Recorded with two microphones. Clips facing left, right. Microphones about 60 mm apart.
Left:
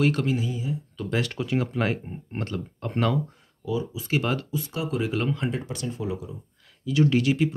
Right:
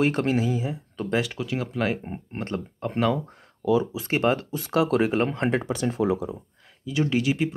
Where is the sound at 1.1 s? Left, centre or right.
Centre.